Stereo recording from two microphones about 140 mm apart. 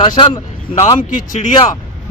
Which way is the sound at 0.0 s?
35° left (ahead or behind).